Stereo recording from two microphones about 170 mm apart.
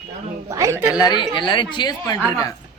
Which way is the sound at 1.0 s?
25° left (ahead or behind).